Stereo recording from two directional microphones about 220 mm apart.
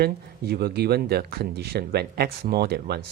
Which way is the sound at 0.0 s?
45° right (ahead or behind).